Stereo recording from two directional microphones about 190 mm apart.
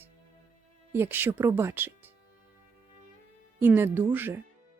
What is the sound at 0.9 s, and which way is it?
Speech, 10° right (ahead or behind).